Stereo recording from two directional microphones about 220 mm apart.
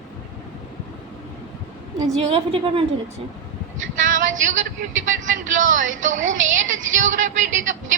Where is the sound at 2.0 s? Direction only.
30° right (ahead or behind).